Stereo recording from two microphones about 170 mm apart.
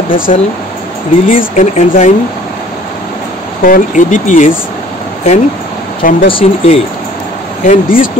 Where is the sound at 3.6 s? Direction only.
50° left (ahead or behind).